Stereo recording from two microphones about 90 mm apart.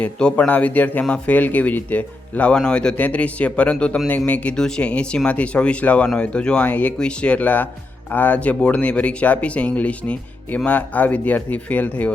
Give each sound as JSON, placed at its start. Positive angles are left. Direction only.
{"t": 0.0, "sound": "speech", "side_deg": 10}